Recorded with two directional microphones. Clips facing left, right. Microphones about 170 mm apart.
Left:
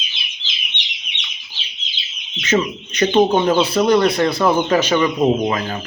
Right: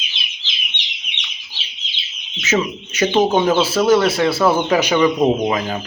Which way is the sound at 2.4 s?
5° right (ahead or behind).